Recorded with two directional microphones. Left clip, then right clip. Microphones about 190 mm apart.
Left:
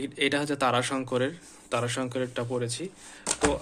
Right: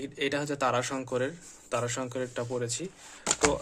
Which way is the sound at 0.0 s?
10° right (ahead or behind).